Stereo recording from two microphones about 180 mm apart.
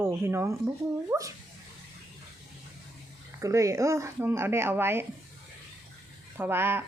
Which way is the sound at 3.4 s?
15° right (ahead or behind).